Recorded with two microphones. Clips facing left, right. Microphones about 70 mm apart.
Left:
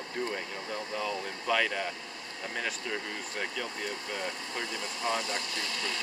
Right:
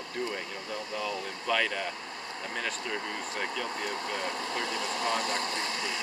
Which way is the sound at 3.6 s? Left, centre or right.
Right.